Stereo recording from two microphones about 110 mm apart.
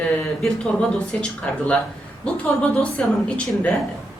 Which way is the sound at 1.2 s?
10° left (ahead or behind).